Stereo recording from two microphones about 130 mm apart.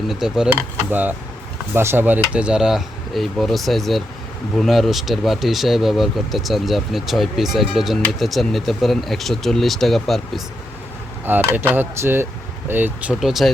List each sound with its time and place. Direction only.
0.1 s speech: 5° right (ahead or behind)
11.3 s speech: 15° right (ahead or behind)
13.1 s speech: centre (ahead or behind)